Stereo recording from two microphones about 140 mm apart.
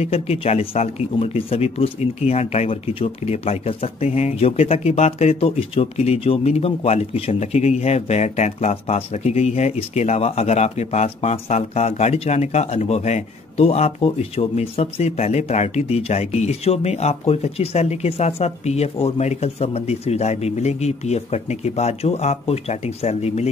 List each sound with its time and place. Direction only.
0.0 s speech: 45° left (ahead or behind)